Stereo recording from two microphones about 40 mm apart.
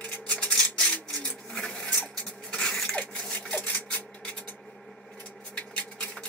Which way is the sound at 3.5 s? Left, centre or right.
Left.